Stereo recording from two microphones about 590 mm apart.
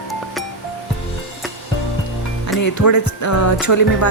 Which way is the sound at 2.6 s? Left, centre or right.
Left.